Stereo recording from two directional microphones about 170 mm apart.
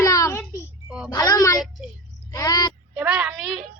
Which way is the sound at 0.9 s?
5° right (ahead or behind).